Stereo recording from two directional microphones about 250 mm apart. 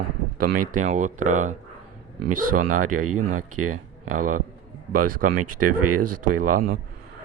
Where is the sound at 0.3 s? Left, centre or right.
Right.